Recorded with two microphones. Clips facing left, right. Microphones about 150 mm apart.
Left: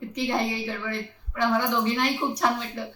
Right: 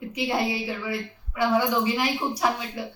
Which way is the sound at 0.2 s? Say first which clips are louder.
Right 1 dB; 5° right (ahead or behind).